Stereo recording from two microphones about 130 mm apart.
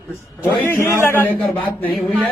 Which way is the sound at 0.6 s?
20° left (ahead or behind).